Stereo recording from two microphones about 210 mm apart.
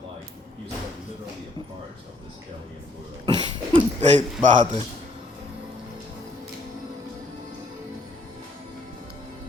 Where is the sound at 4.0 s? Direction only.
35° right (ahead or behind).